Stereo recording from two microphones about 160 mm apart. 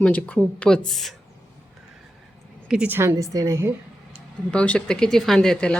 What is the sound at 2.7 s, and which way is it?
Speech, 5° right (ahead or behind).